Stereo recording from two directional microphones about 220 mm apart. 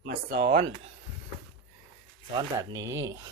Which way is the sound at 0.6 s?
30° right (ahead or behind).